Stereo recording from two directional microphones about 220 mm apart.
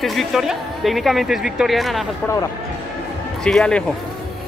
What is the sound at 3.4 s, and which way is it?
Speech, 5° left (ahead or behind).